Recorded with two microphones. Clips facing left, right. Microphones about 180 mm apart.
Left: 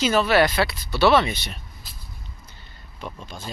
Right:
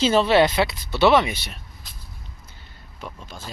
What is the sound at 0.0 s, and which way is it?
Speech, 25° right (ahead or behind).